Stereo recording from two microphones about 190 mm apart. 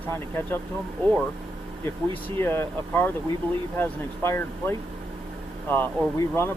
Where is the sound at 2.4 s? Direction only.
10° left (ahead or behind).